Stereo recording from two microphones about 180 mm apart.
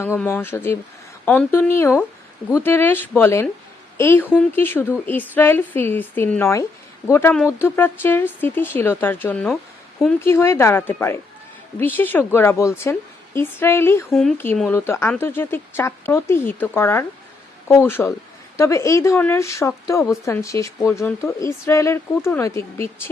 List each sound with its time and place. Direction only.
0.0 s speech: 15° left (ahead or behind)
14.1 s speech: centre (ahead or behind)
14.7 s speech: 15° left (ahead or behind)